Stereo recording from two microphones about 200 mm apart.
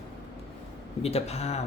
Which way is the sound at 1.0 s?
30° left (ahead or behind).